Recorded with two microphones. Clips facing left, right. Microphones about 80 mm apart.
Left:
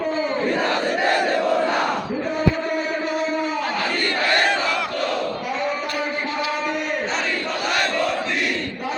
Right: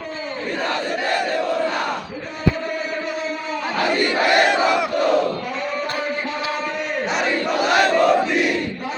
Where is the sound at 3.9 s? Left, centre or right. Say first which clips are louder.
Right 7 dB; centre.